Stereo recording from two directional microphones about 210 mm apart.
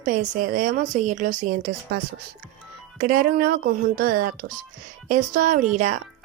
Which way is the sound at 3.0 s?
45° right (ahead or behind).